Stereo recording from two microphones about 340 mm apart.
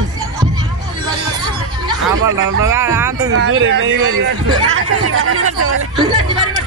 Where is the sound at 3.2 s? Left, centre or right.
Right.